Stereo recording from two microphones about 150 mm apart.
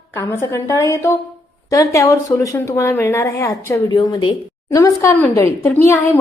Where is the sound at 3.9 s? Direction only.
30° left (ahead or behind).